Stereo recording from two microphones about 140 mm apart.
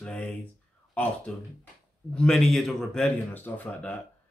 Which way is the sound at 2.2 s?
5° left (ahead or behind).